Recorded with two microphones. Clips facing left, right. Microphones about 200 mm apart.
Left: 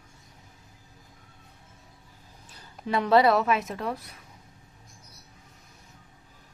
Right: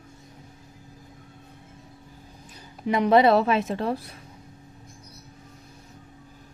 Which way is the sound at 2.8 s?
15° right (ahead or behind).